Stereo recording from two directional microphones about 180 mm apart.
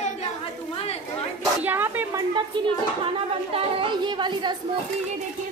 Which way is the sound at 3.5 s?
30° right (ahead or behind).